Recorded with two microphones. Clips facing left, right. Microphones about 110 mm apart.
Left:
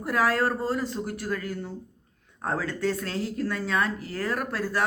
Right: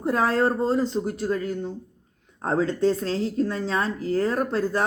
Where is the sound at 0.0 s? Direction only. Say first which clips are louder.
Right 3 dB; 30° right (ahead or behind).